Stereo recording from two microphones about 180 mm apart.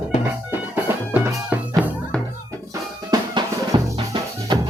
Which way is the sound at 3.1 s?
20° right (ahead or behind).